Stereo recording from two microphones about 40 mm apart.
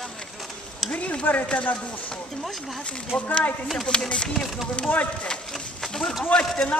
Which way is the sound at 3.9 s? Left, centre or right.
Left.